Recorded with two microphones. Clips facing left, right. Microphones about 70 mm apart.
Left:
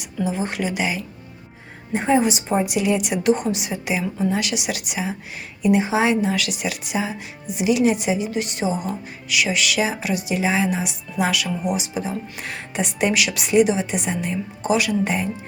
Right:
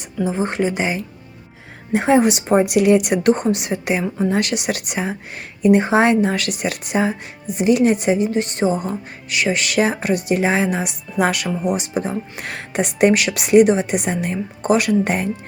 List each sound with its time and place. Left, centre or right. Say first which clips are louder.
0.3 s speech: right 5 dB; right
1.9 s speech: right 4 dB; right